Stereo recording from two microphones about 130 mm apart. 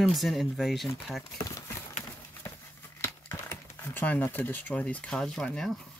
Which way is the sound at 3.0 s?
15° left (ahead or behind).